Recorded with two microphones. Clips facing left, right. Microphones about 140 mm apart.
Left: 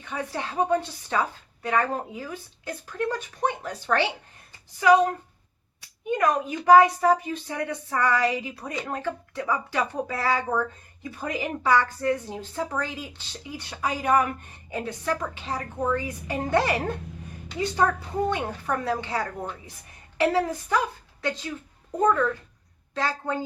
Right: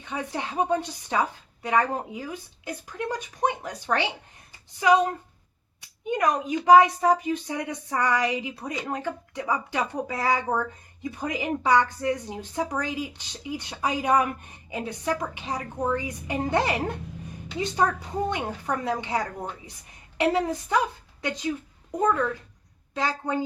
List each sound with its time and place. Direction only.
0.0 s a woman's voice: 20° right (ahead or behind)
6.1 s a woman's voice: 20° right (ahead or behind)
18.3 s a woman's voice: 20° right (ahead or behind)